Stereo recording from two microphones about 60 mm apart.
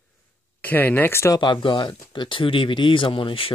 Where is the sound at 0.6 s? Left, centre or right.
Left.